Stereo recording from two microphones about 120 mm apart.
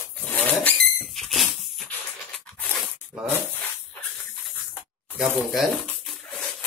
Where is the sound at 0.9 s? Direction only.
Centre (ahead or behind).